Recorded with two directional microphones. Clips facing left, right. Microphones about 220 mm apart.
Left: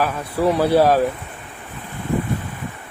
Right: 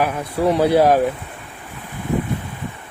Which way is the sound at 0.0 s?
15° right (ahead or behind).